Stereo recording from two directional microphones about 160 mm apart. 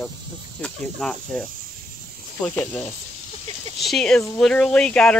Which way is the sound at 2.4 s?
5° left (ahead or behind).